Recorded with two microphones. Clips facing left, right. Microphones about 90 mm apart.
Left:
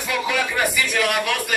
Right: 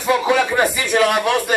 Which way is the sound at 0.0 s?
30° right (ahead or behind).